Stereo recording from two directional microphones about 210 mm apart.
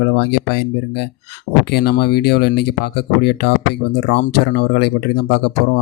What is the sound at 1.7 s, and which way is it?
Speech, 50° left (ahead or behind).